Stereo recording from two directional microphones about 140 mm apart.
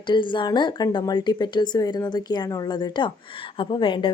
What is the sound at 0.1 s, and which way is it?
A woman's voice, 35° left (ahead or behind).